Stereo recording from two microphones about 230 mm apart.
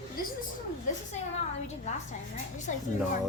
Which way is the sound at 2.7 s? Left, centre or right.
Left.